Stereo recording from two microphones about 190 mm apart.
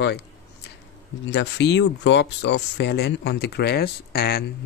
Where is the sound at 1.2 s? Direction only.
65° left (ahead or behind).